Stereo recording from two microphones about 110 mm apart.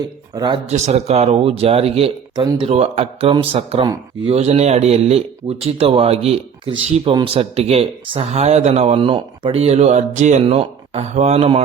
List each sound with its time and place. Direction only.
0.3 s speech: 40° right (ahead or behind)
0.7 s a man's voice: 80° right; by 2.1 s 65° right (ahead or behind)
2.3 s speech: 40° right (ahead or behind)
2.6 s a man's voice: 75° right (ahead or behind)
4.3 s a man's voice: 80° right; by 7.2 s 55° right (ahead or behind)
7.3 s a man's voice: 70° right (ahead or behind)
8.3 s speech: 90° right; by 9.0 s 75° right (ahead or behind)
9.0 s speech: 50° right (ahead or behind); by 10.4 s 90° right
10.4 s a man's voice: 60° right (ahead or behind); by 11.6 s 80° right